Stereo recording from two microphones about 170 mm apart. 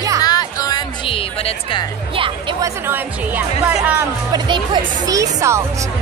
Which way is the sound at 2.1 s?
30° right (ahead or behind).